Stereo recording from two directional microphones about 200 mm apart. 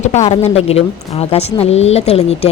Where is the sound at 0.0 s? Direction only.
35° left (ahead or behind).